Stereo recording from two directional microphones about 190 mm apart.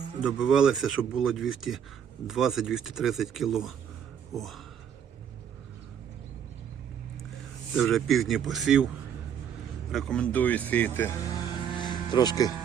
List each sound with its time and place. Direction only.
0.2 s speech: 5° right (ahead or behind)
7.8 s speech: centre (ahead or behind)
9.9 s speech: 5° left (ahead or behind)
11.5 s music: 25° left (ahead or behind)